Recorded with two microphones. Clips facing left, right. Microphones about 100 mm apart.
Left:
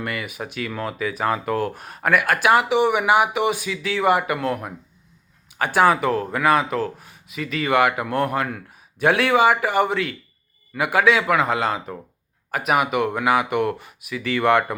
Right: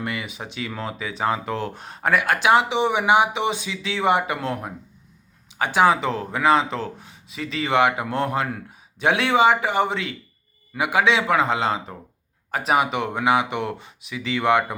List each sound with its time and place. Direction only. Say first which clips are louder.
0.0 s speech: left 1 dB; 20° right (ahead or behind)
5.5 s speech: left 1 dB; 20° right (ahead or behind)